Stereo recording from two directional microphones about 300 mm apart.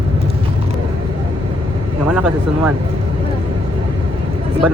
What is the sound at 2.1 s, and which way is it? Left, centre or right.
Speech, centre.